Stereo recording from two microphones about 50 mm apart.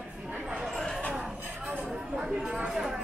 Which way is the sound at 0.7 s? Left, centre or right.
Centre.